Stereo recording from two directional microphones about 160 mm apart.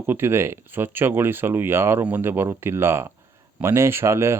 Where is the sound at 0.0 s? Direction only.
15° right (ahead or behind).